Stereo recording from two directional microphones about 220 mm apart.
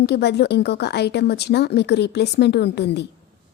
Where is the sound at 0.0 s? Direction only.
50° left (ahead or behind).